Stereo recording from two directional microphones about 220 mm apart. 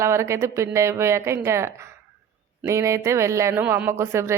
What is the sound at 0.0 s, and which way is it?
Speech, 10° right (ahead or behind).